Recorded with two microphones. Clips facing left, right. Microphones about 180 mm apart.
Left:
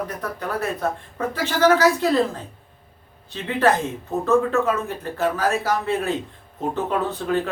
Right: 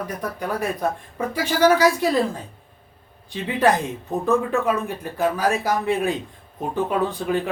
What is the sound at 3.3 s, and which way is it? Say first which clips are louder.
Speech: even; 15° right (ahead or behind).